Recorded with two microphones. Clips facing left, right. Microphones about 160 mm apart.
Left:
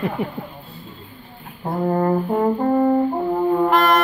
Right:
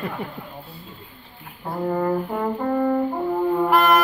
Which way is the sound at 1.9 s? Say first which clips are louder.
Left 3 dB; 35° left (ahead or behind).